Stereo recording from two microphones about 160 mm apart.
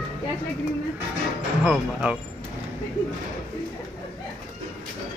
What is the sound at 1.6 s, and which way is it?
Speech, 5° right (ahead or behind).